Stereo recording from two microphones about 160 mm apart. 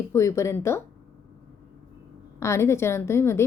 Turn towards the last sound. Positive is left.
turn(degrees=15)  # may be behind; listen again after turning